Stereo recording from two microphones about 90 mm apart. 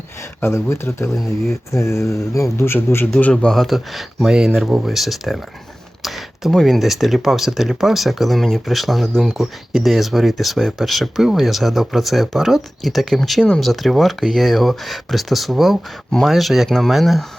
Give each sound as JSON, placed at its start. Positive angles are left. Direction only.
{"t": 0.4, "sound": "speech", "side_deg": 30}
{"t": 3.5, "sound": "speech", "side_deg": 0}